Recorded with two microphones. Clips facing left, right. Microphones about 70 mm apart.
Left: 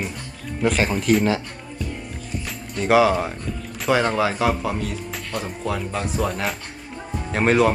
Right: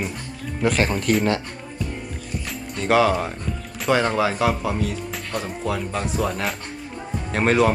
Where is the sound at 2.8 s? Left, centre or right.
Centre.